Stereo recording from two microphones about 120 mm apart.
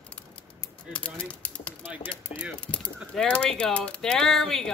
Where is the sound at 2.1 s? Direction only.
10° left (ahead or behind).